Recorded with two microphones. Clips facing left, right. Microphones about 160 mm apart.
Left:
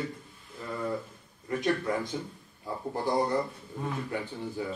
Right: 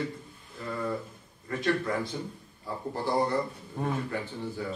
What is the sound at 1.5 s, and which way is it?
A man's voice, 15° left (ahead or behind).